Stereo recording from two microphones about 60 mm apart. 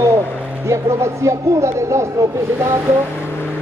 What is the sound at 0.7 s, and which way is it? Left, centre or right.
Speech, right.